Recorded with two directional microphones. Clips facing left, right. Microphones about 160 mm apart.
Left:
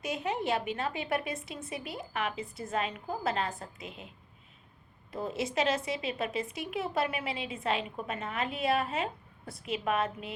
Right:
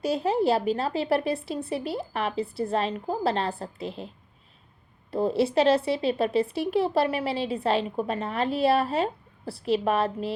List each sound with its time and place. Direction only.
0.0 s a woman's voice: 30° right (ahead or behind)
5.1 s a woman's voice: 30° right (ahead or behind)